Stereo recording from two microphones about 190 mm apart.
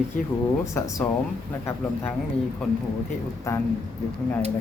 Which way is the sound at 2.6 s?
Centre (ahead or behind).